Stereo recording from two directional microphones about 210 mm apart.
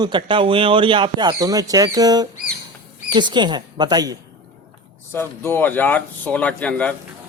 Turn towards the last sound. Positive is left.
turn(degrees=5)  # may be behind; listen again after turning